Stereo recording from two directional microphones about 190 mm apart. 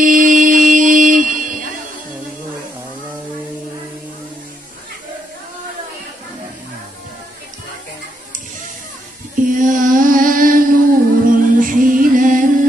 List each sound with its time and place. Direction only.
0.0 s music: 45° right (ahead or behind)
9.3 s a sound: 45° right (ahead or behind)
11.2 s music: 45° right (ahead or behind)